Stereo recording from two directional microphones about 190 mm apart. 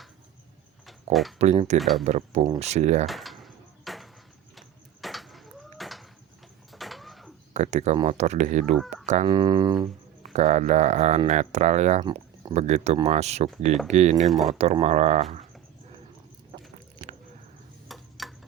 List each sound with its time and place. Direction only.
1.1 s speech: centre (ahead or behind)
1.4 s speech: 35° right (ahead or behind)
1.8 s speech: centre (ahead or behind)
2.0 s speech: 35° right (ahead or behind)
3.1 s a sound: centre (ahead or behind)
6.7 s printer: centre (ahead or behind)
7.5 s speech: 35° right (ahead or behind)
9.3 s speech: 25° right (ahead or behind)
10.3 s speech: 40° right (ahead or behind)
12.0 s a sound: 25° right (ahead or behind)
12.5 s speech: 35° right (ahead or behind)
14.3 s speech: centre (ahead or behind)
14.6 s speech: 35° right (ahead or behind)
17.8 s a sound: centre (ahead or behind)